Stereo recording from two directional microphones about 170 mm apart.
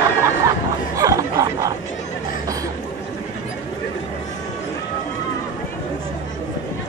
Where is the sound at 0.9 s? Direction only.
20° right (ahead or behind).